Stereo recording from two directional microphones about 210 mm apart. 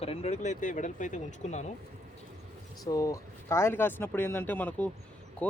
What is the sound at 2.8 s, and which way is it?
Speech, 15° left (ahead or behind).